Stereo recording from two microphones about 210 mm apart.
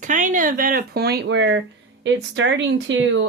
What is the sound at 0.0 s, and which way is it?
Speech, 35° right (ahead or behind).